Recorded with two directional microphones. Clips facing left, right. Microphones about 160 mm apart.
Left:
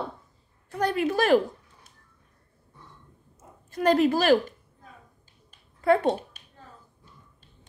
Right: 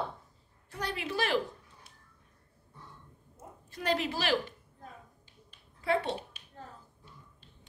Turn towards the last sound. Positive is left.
turn(degrees=45)  # may be behind; listen again after turning